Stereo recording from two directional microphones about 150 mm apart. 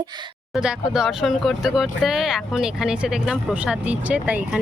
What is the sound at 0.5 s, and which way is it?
Speech, 5° right (ahead or behind).